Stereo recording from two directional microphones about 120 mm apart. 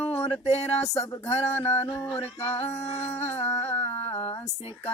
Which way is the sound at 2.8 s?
20° left (ahead or behind).